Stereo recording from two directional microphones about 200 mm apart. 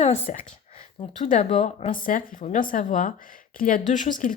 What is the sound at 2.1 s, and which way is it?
Speech, 45° left (ahead or behind).